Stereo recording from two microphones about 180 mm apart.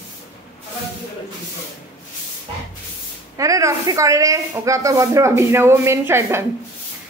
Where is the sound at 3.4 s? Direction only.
20° right (ahead or behind).